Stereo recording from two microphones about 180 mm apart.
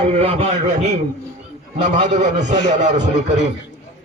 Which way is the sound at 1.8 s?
40° right (ahead or behind).